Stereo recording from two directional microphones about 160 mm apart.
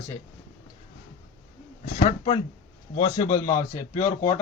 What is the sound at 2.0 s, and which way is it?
Speech, 35° left (ahead or behind).